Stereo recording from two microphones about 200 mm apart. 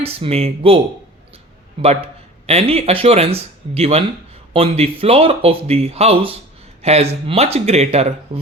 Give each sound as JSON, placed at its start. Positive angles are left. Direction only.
{"t": 0.0, "sound": "speech", "side_deg": -30}
{"t": 2.5, "sound": "speech", "side_deg": -30}